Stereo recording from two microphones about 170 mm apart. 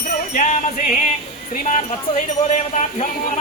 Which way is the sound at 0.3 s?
45° left (ahead or behind).